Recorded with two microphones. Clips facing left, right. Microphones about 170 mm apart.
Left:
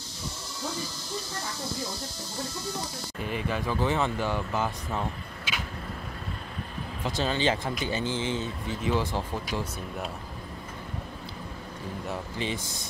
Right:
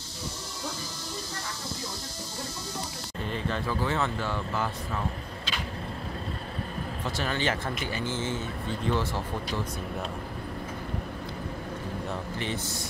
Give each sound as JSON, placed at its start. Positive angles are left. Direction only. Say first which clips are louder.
{"t": 3.2, "sound": "speech", "louder": "left 1 dB", "side_deg": 10}
{"t": 7.1, "sound": "speech", "louder": "left 3 dB", "side_deg": 20}